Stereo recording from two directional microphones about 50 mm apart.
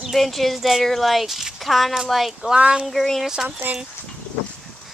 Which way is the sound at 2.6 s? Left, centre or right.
Centre.